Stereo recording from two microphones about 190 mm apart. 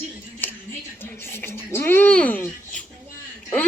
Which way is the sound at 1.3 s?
10° left (ahead or behind).